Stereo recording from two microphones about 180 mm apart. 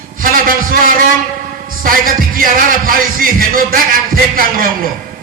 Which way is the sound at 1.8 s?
50° right (ahead or behind).